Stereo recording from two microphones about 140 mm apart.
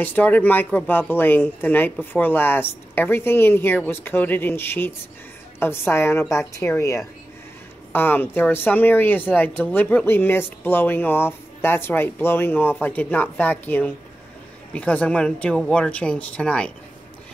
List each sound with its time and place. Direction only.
0.0 s speech: 15° left (ahead or behind)